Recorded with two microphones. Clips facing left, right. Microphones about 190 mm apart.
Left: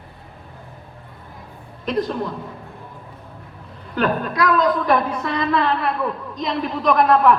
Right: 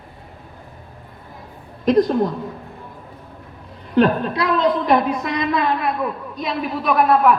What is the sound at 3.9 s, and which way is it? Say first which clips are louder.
A woman's voice: right 4 dB; 30° right (ahead or behind).